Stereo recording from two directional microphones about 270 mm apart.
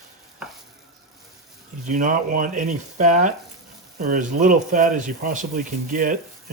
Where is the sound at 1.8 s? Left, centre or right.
Right.